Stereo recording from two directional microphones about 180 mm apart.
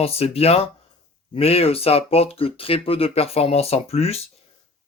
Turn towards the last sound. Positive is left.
turn(degrees=35)  # may be behind; listen again after turning